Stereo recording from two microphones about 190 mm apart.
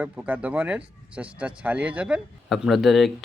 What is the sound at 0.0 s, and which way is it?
Speech, 10° right (ahead or behind).